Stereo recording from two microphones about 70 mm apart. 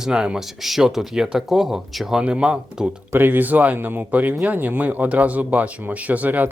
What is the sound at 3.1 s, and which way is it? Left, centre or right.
Speech, right.